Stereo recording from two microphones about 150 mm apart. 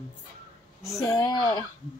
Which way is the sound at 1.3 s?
25° left (ahead or behind).